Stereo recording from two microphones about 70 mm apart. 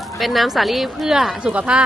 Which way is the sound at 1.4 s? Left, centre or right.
Centre.